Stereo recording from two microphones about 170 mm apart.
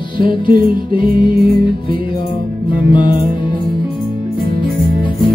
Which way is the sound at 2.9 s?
30° left (ahead or behind).